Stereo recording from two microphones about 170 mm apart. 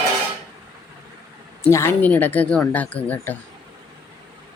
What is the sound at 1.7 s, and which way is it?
Speech, 15° left (ahead or behind).